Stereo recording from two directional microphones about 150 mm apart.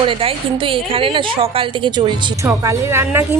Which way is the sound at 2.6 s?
20° right (ahead or behind).